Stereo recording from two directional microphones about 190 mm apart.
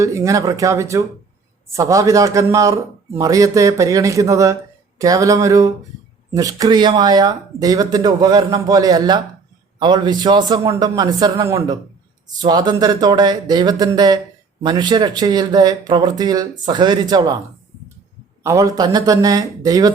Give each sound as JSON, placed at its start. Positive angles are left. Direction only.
{"t": 0.0, "sound": "a man's voice", "side_deg": -15}
{"t": 18.4, "sound": "a man's voice", "side_deg": -15}